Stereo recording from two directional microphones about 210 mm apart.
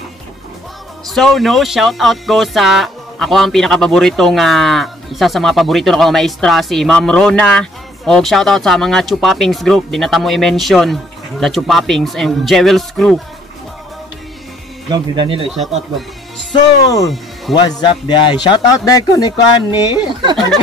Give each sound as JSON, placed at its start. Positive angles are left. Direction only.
{"t": 1.0, "sound": "speech", "side_deg": 0}
{"t": 14.9, "sound": "speech", "side_deg": -25}
{"t": 16.6, "sound": "speech", "side_deg": 15}
{"t": 17.0, "sound": "speech", "side_deg": 0}
{"t": 17.6, "sound": "a man's voice", "side_deg": 20}